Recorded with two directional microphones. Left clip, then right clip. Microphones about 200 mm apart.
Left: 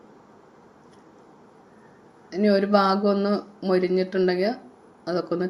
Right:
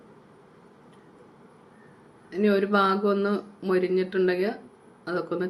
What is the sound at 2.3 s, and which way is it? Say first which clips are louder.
Speech: left 3 dB; 15° left (ahead or behind).